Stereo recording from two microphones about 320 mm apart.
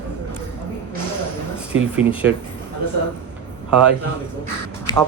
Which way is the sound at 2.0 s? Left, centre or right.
Centre.